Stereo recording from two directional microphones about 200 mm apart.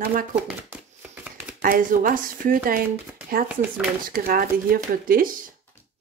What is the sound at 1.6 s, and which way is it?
Speech, 45° right (ahead or behind).